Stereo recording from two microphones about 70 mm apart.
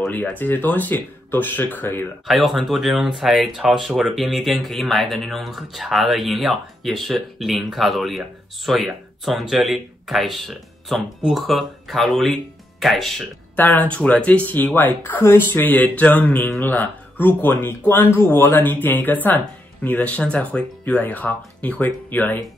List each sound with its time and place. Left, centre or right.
0.1 s speech: left
2.2 s speech: centre
13.6 s speech: left